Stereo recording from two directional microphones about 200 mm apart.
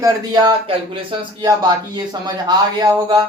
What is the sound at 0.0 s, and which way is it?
Speech, 20° right (ahead or behind).